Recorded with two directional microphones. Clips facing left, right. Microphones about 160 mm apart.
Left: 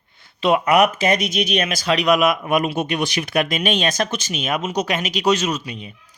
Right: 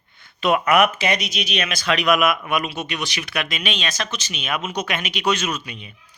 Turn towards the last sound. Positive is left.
turn(degrees=40)  # may be behind; listen again after turning